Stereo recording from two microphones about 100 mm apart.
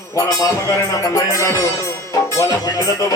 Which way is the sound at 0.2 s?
35° left (ahead or behind).